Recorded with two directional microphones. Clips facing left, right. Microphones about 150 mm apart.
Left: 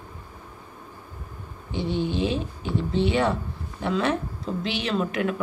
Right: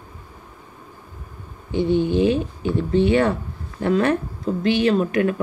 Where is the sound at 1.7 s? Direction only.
50° right (ahead or behind).